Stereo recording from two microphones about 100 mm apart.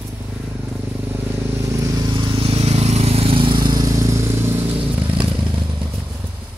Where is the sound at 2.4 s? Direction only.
90° right; by 3.8 s 50° right (ahead or behind).